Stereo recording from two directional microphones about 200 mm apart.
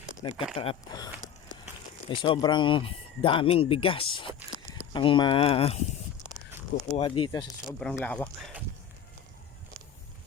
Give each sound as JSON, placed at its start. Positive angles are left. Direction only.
{"t": 0.2, "sound": "speech", "side_deg": 25}
{"t": 6.9, "sound": "speech", "side_deg": 30}
{"t": 7.3, "sound": "speech", "side_deg": 15}